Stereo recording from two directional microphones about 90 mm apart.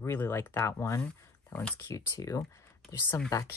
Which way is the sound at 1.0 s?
10° left (ahead or behind).